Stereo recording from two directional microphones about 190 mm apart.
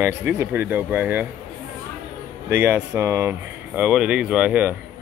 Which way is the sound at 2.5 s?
10° right (ahead or behind).